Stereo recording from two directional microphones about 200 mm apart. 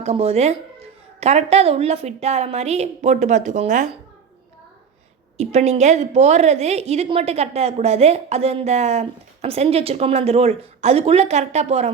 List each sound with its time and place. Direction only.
0.0 s a woman's voice: 30° right (ahead or behind)
5.4 s a woman's voice: 35° right (ahead or behind)